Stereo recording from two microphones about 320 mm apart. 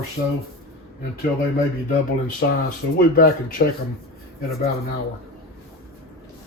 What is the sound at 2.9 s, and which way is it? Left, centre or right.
Speech, left.